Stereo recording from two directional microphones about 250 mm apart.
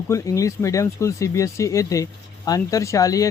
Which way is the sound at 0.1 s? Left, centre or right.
Centre.